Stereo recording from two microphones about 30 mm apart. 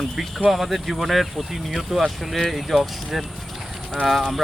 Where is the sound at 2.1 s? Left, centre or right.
Centre.